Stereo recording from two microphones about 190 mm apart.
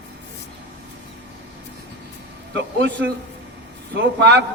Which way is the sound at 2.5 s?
70° right (ahead or behind).